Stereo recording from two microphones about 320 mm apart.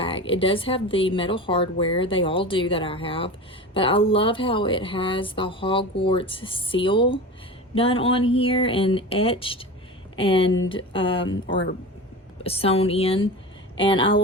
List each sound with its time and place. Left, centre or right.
0.3 s speech: centre
12.4 s speech: centre